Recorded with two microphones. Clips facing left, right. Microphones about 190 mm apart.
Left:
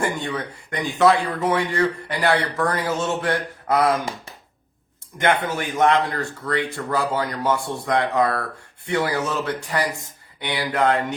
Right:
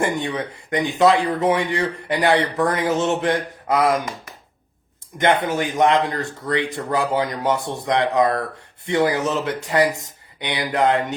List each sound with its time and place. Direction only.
0.0 s speech: 15° right (ahead or behind)
5.1 s speech: 20° right (ahead or behind)